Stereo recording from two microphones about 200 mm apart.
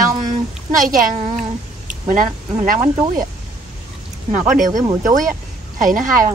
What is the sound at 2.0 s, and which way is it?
Speech, 40° right (ahead or behind).